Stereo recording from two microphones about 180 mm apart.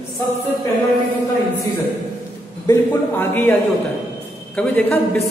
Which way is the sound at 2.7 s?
10° left (ahead or behind).